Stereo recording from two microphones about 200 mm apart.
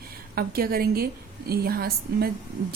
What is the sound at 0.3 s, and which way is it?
Speech, 50° right (ahead or behind).